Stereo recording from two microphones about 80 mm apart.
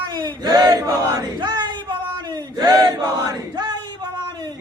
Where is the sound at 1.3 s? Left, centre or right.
Right.